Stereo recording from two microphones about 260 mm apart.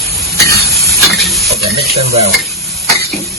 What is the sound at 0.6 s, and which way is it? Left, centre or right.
Hiss, centre.